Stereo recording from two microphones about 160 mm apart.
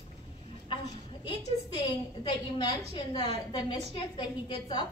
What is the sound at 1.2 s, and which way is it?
A woman's voice, 30° left (ahead or behind).